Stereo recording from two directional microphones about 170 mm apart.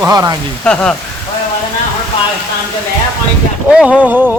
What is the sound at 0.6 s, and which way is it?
Speech, 5° left (ahead or behind).